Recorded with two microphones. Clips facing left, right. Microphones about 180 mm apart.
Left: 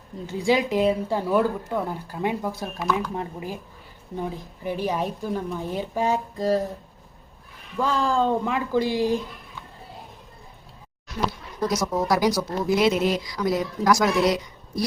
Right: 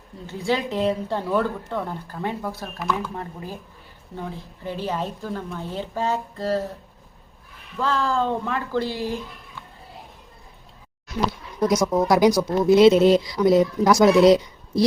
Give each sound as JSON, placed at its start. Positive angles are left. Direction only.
{"t": 0.3, "sound": "speech", "side_deg": 15}
{"t": 7.8, "sound": "speech", "side_deg": 15}
{"t": 12.0, "sound": "speech", "side_deg": -20}